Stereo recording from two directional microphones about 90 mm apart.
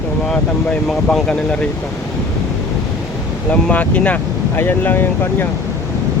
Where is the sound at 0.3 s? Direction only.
10° left (ahead or behind).